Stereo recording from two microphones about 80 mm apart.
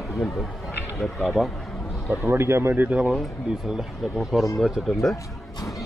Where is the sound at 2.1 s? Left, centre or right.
Right.